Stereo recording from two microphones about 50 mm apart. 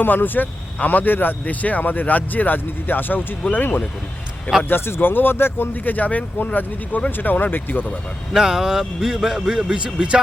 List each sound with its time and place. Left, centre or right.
0.0 s a man's voice: left
8.3 s a man's voice: centre